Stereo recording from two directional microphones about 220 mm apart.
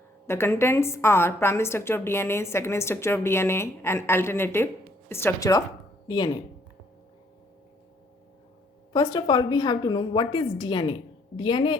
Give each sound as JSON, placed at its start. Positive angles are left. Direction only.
{"t": 0.3, "sound": "a woman's voice", "side_deg": 10}
{"t": 8.9, "sound": "a woman's voice", "side_deg": 20}